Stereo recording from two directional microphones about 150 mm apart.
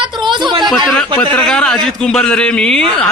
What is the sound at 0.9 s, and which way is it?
A man's voice, 10° left (ahead or behind).